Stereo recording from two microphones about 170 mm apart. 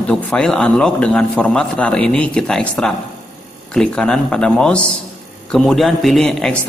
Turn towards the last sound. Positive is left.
turn(degrees=5)  # may be behind; listen again after turning